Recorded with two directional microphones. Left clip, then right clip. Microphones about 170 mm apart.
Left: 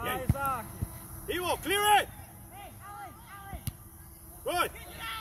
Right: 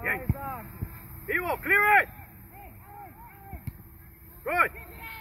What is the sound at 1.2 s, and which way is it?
Speech, 35° left (ahead or behind).